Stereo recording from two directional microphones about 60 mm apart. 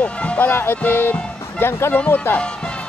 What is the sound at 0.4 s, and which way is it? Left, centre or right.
Speech, left.